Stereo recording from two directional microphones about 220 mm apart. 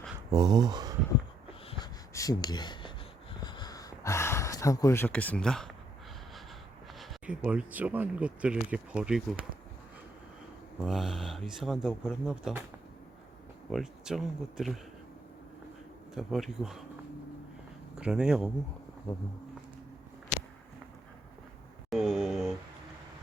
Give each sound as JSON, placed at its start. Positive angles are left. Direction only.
{"t": 0.3, "sound": "speech", "side_deg": -20}
{"t": 1.5, "sound": "a sound", "side_deg": 25}
{"t": 2.1, "sound": "speech", "side_deg": 15}
{"t": 3.4, "sound": "a sound", "side_deg": 20}
{"t": 7.0, "sound": "speech", "side_deg": 0}
{"t": 10.8, "sound": "speech", "side_deg": 0}
{"t": 13.7, "sound": "speech", "side_deg": 0}
{"t": 16.1, "sound": "speech", "side_deg": 0}
{"t": 17.9, "sound": "speech", "side_deg": -5}
{"t": 21.8, "sound": "a sound", "side_deg": 0}